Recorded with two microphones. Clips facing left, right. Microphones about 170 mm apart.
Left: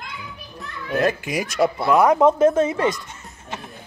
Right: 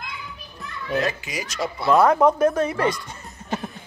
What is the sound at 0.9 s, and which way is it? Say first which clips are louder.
Speech: left 5 dB; 50° left (ahead or behind).